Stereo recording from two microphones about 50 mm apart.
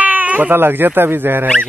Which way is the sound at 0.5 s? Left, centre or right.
Right.